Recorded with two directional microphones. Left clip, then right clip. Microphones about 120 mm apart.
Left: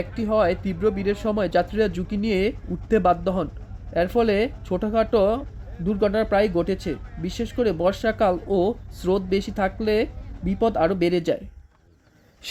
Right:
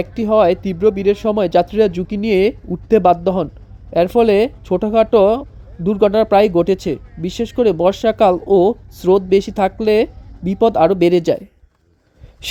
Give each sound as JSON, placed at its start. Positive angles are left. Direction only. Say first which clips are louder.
{"t": 0.0, "sound": "speech", "louder": "right 8 dB", "side_deg": -35}